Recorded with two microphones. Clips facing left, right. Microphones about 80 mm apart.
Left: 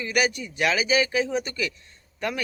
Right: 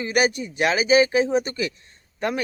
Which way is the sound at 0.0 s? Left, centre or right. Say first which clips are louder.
Right 3 dB; right.